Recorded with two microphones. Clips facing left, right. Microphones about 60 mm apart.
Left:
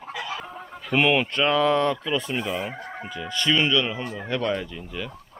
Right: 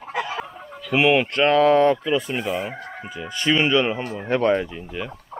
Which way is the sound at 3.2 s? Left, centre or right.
Right.